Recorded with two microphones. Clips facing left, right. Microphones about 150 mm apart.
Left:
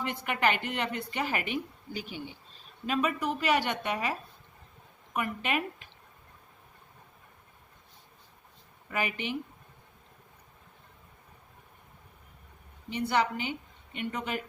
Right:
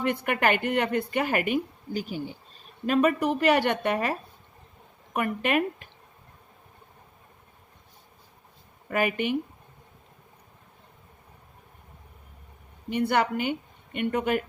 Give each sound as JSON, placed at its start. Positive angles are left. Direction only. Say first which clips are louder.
{"t": 0.0, "sound": "speech", "louder": "right 4 dB", "side_deg": -55}
{"t": 2.8, "sound": "a woman's voice", "louder": "right 7 dB", "side_deg": -55}
{"t": 8.9, "sound": "speech", "louder": "right 7 dB", "side_deg": -55}
{"t": 12.9, "sound": "a woman's voice", "louder": "right 4 dB", "side_deg": -55}